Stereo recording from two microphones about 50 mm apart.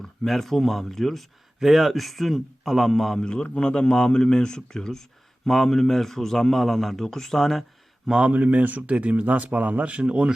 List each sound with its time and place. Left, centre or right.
0.0 s a man's voice: centre
3.2 s a man's voice: centre
8.3 s speech: right